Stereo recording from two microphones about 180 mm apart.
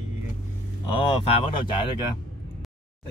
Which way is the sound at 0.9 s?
30° left (ahead or behind).